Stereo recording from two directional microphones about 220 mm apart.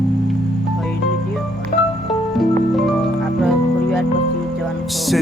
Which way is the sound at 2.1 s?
Centre (ahead or behind).